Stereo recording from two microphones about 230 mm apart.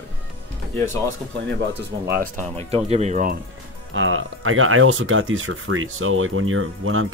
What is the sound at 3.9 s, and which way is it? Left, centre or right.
Speech, right.